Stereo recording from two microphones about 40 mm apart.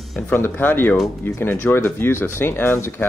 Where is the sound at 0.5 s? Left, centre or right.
Left.